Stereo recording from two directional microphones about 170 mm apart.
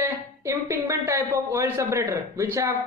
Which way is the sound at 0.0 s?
15° right (ahead or behind).